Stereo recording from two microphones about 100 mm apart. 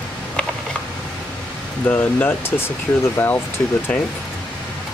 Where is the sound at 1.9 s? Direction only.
15° left (ahead or behind).